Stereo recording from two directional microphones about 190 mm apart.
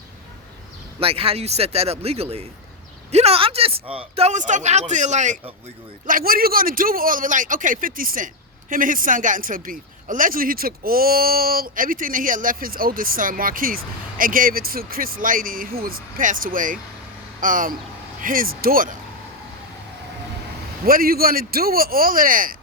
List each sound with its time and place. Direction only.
0.9 s a man's voice: 30° right (ahead or behind); by 18.9 s 50° right (ahead or behind)
20.8 s a man's voice: 50° right (ahead or behind)